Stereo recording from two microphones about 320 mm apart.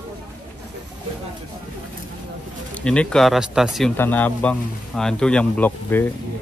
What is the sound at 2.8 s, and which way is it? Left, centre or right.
Speech, centre.